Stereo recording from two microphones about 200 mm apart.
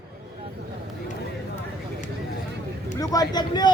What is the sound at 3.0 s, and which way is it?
Speech, 20° left (ahead or behind).